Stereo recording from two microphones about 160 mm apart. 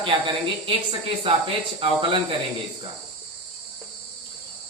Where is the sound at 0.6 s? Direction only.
35° right (ahead or behind).